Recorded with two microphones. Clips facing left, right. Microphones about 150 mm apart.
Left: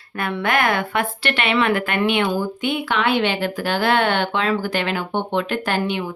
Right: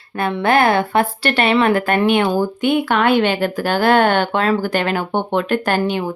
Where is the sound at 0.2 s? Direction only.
30° right (ahead or behind).